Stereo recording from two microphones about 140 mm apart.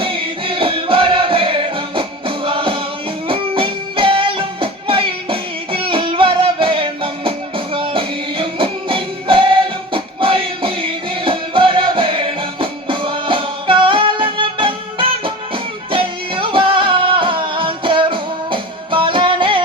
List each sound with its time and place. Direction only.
0.0 s music: 40° right (ahead or behind)